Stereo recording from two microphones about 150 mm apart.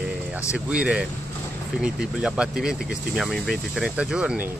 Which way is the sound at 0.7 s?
10° right (ahead or behind).